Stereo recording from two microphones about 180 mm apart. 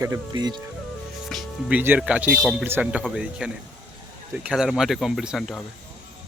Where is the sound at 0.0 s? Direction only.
20° right (ahead or behind).